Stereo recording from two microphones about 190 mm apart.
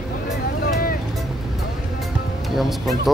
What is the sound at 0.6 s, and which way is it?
Vehicle, 50° left (ahead or behind).